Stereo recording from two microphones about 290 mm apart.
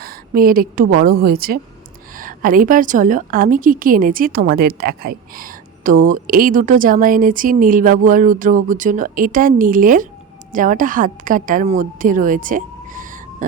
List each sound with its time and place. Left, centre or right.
0.0 s a woman's voice: right